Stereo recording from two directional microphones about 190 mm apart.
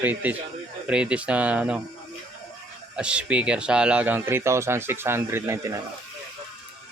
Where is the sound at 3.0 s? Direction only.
5° right (ahead or behind).